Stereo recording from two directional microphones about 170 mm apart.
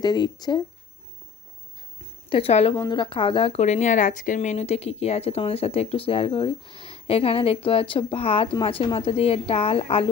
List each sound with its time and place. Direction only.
0.0 s speech: 25° left (ahead or behind)
2.3 s speech: 35° left (ahead or behind)